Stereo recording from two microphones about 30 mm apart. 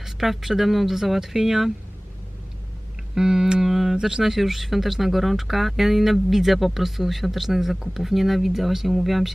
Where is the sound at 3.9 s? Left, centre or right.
Right.